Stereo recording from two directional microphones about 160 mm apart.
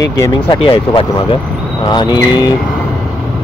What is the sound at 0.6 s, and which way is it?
Speech, 35° left (ahead or behind).